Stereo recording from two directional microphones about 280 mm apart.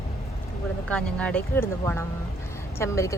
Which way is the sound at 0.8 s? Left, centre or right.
Centre.